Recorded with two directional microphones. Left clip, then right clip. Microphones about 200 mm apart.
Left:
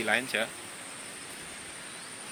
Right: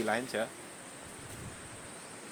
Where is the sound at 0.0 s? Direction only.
25° right (ahead or behind).